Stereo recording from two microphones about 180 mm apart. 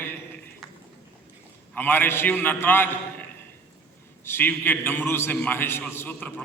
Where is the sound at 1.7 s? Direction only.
10° left (ahead or behind).